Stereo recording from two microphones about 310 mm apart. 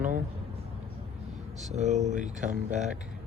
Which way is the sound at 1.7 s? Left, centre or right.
Right.